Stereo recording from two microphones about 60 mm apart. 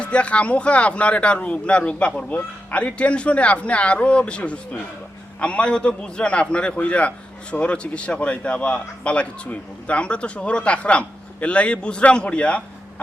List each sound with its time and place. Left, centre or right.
0.0 s speech: centre